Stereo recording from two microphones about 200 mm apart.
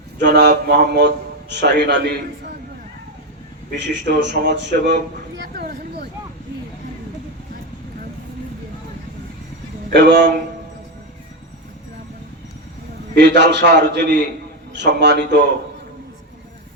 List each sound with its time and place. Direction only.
0.3 s a man's voice: 45° right (ahead or behind)
3.8 s speech: 60° right (ahead or behind)
5.4 s a sound: 50° right (ahead or behind)
9.9 s speech: 60° right (ahead or behind)
13.1 s speech: 55° right (ahead or behind)